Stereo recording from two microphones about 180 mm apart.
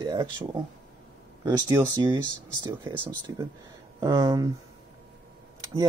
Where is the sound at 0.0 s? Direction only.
20° right (ahead or behind).